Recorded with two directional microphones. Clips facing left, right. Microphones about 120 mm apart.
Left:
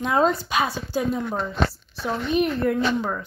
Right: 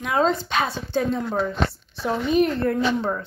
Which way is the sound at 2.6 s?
30° right (ahead or behind).